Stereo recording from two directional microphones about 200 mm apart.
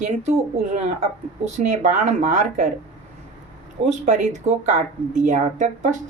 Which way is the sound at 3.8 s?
40° right (ahead or behind).